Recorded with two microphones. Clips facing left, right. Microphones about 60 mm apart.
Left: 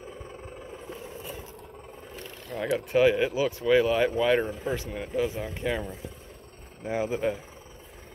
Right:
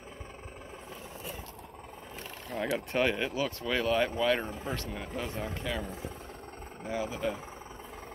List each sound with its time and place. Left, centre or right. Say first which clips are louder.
2.5 s speech: left 2 dB; centre
2.9 s speech: left 10 dB; centre
5.6 s speech: left 8 dB; left
6.9 s speech: left 5 dB; left